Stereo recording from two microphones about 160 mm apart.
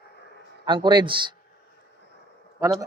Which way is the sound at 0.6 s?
30° right (ahead or behind).